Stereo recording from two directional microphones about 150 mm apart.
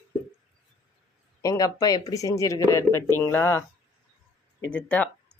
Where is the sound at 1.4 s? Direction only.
25° left (ahead or behind).